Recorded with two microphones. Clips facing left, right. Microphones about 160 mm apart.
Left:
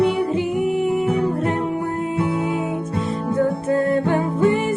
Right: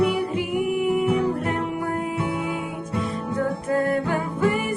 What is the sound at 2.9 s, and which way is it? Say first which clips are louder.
Music: left 3 dB; 25° left (ahead or behind).